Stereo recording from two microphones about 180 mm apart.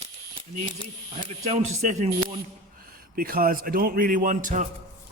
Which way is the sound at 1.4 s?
40° right (ahead or behind).